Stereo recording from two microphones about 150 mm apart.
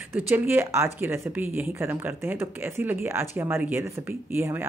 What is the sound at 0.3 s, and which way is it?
Speech, 15° right (ahead or behind).